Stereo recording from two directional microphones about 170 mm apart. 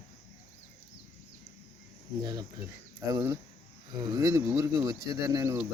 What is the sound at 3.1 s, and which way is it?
Speech, 20° right (ahead or behind).